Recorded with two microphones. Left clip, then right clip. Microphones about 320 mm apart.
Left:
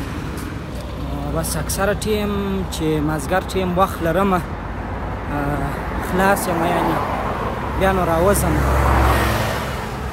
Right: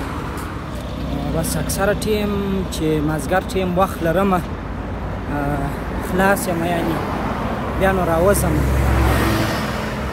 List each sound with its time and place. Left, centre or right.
1.8 s speech: centre
6.1 s speech: centre
7.8 s speech: centre
8.5 s vehicle: centre